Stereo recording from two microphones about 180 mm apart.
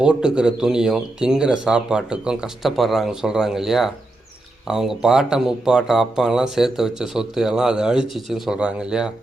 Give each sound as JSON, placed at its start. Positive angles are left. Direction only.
{"t": 0.0, "sound": "speech", "side_deg": -5}